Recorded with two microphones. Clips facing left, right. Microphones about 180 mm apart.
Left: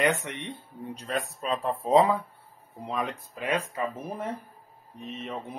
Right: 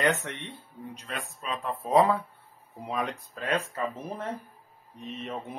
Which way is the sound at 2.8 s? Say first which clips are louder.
Even; centre (ahead or behind).